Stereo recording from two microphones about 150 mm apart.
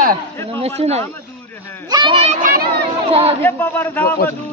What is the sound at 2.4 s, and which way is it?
Speech, 65° right (ahead or behind).